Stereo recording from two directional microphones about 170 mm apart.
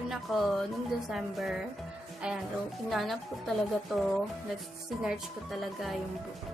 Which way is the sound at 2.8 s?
Centre (ahead or behind).